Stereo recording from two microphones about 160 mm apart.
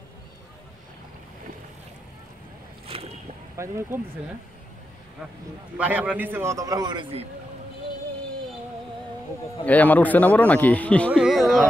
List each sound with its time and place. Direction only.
2.9 s boat: 35° right (ahead or behind)
3.5 s speech: 15° right (ahead or behind)
5.8 s a man's voice: 10° right (ahead or behind); by 7.2 s 35° right (ahead or behind)
9.7 s speech: 10° left (ahead or behind)